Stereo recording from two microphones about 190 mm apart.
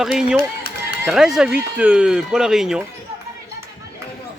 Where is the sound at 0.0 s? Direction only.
Centre (ahead or behind).